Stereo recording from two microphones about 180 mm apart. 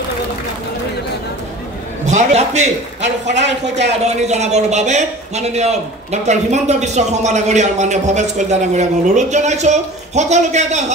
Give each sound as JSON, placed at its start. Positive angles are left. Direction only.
{"t": 2.0, "sound": "speech", "side_deg": -40}
{"t": 3.4, "sound": "speech", "side_deg": -75}
{"t": 4.0, "sound": "speech", "side_deg": -40}